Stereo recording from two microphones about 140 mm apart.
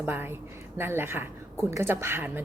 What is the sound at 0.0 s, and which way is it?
A woman's voice, 15° right (ahead or behind).